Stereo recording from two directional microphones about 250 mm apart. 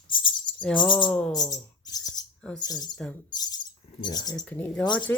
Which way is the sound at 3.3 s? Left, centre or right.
Centre.